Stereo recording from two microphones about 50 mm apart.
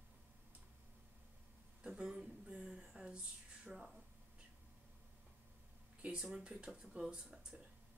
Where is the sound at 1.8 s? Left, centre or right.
Centre.